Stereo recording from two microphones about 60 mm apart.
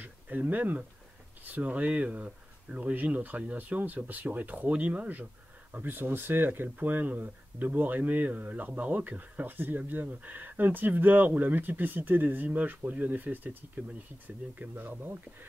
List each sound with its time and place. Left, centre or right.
0.0 s speech: right
5.7 s speech: right